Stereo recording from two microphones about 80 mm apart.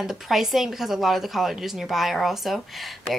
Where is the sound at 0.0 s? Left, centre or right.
Centre.